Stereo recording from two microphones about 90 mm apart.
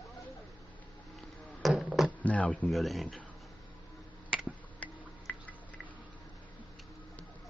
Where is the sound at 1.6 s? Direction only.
Centre (ahead or behind).